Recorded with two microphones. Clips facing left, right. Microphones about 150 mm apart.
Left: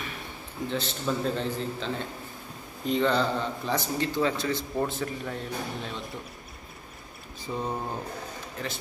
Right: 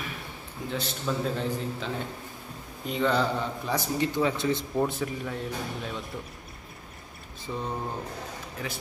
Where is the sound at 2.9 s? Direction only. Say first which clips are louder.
Left 1 dB; 10° right (ahead or behind).